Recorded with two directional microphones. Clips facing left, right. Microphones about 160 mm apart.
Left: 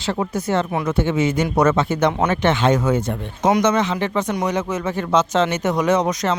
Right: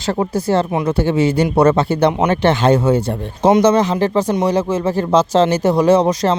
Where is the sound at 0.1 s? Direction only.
35° right (ahead or behind).